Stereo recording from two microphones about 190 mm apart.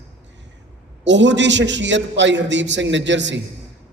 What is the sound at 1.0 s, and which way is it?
A man's voice, 70° right (ahead or behind).